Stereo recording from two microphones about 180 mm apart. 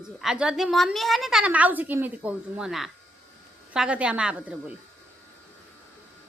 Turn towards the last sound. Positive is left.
turn(degrees=-5)  # may be behind; listen again after turning